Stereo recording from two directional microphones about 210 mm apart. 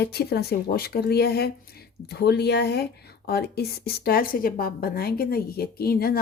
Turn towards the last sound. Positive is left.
turn(degrees=45)  # may be behind; listen again after turning